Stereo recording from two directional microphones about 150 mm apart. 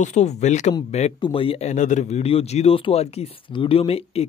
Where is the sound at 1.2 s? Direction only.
35° left (ahead or behind).